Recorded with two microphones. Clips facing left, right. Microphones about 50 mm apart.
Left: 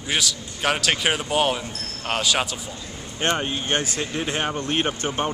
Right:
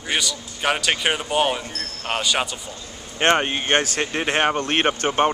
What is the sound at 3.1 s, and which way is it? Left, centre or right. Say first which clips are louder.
Speech: right 5 dB; right.